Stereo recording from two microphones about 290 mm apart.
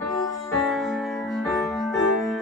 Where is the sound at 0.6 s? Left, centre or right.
Centre.